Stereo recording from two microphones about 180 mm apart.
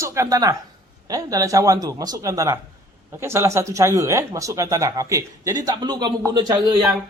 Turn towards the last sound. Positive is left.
turn(degrees=-25)  # may be behind; listen again after turning